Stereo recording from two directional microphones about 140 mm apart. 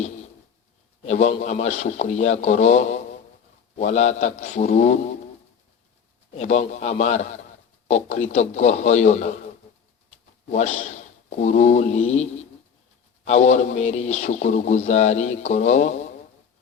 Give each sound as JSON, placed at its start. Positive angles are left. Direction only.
{"t": 1.0, "sound": "speech", "side_deg": 55}
{"t": 6.3, "sound": "speech", "side_deg": 50}
{"t": 10.5, "sound": "speech", "side_deg": 55}